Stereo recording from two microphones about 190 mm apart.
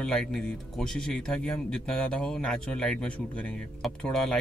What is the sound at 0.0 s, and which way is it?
A man's voice, 5° left (ahead or behind).